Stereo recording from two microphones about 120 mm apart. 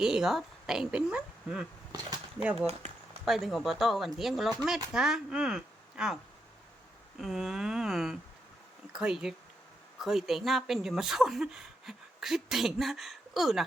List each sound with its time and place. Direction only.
0.0 s speech: 5° right (ahead or behind)
2.6 s speech: 55° right (ahead or behind)
3.2 s speech: centre (ahead or behind)
7.2 s speech: centre (ahead or behind)